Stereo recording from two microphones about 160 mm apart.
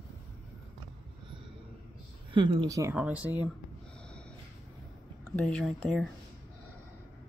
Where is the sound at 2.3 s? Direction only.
30° right (ahead or behind).